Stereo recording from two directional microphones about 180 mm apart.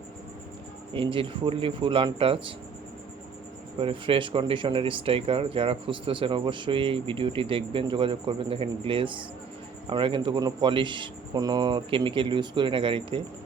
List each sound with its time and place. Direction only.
0.9 s speech: 30° right (ahead or behind)
3.8 s speech: 30° right (ahead or behind)